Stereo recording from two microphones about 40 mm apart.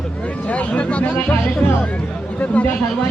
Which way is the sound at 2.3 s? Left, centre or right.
Left.